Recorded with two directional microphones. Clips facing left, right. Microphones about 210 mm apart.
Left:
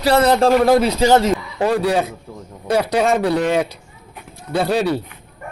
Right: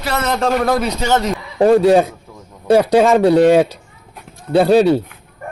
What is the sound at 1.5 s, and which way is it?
A man's voice, 35° right (ahead or behind).